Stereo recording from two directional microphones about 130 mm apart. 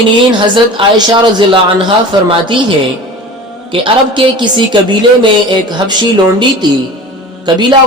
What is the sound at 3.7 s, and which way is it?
Speech, 40° right (ahead or behind).